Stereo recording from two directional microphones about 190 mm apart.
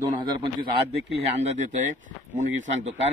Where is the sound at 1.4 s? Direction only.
40° right (ahead or behind).